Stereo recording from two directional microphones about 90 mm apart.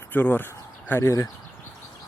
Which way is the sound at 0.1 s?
25° left (ahead or behind).